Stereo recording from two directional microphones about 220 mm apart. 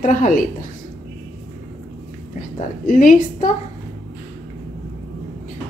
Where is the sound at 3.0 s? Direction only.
35° left (ahead or behind).